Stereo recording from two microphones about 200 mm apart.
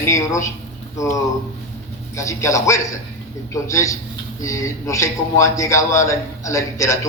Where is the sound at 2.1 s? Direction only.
15° left (ahead or behind).